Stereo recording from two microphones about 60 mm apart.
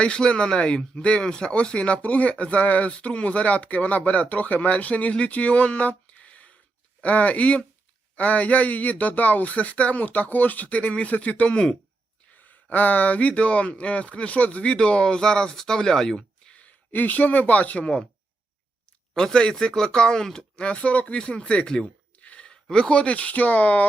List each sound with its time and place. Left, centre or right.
0.0 s speech: centre
12.5 s speech: left; by 16.6 s centre
16.6 s speech: left
19.1 s speech: centre